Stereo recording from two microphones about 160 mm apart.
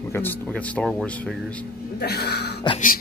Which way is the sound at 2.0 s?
90° left.